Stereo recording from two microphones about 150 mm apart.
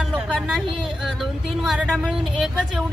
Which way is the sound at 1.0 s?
Centre (ahead or behind).